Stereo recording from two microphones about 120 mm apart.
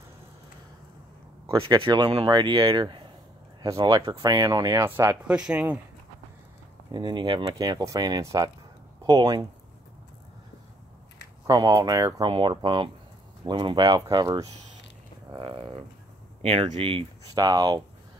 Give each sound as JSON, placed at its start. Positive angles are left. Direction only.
{"t": 1.7, "sound": "speech", "side_deg": -40}
{"t": 5.2, "sound": "speech", "side_deg": -10}
{"t": 6.9, "sound": "speech", "side_deg": -35}
{"t": 11.4, "sound": "speech", "side_deg": -30}
{"t": 12.3, "sound": "speech", "side_deg": -45}
{"t": 15.3, "sound": "a sound", "side_deg": -40}
{"t": 16.7, "sound": "speech", "side_deg": -50}
{"t": 17.3, "sound": "speech", "side_deg": -35}